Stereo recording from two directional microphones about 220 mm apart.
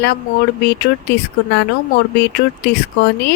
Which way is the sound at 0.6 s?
50° left (ahead or behind).